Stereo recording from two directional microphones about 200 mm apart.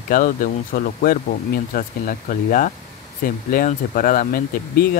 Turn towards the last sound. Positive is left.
turn(degrees=45)  # may be behind; listen again after turning